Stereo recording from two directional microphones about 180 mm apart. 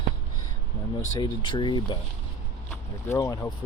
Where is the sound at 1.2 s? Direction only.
25° left (ahead or behind).